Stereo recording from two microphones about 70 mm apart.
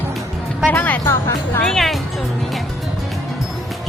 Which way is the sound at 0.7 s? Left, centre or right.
Left.